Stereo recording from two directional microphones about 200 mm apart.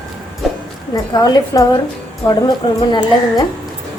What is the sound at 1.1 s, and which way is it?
Speech, 20° left (ahead or behind).